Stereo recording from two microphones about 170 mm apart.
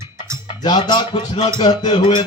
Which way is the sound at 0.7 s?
25° left (ahead or behind).